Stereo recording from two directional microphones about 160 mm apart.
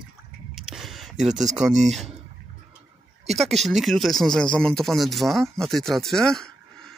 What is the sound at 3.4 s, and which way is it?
Speech, centre (ahead or behind).